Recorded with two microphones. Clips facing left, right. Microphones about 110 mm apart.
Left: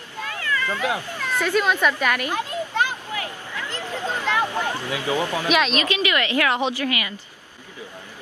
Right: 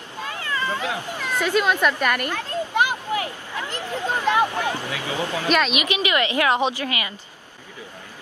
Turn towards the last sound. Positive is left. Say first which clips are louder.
# even
turn(degrees=-25)  # may be behind; listen again after turning